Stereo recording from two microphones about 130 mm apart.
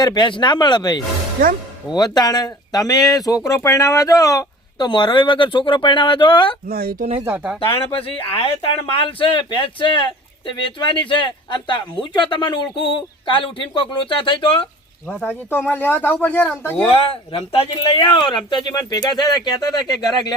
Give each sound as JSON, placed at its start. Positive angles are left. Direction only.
{"t": 0.0, "sound": "speech", "side_deg": 35}
{"t": 7.3, "sound": "speech", "side_deg": -10}
{"t": 7.6, "sound": "speech", "side_deg": 45}
{"t": 15.1, "sound": "speech", "side_deg": 15}
{"t": 16.9, "sound": "speech", "side_deg": 45}